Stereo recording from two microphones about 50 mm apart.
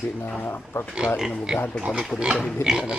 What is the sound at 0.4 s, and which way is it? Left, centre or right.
Speech, left.